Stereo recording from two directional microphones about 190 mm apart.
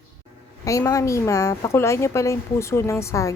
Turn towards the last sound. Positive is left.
turn(degrees=15)  # may be behind; listen again after turning